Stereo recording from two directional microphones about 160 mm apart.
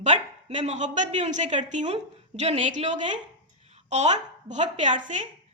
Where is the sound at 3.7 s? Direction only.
45° right (ahead or behind).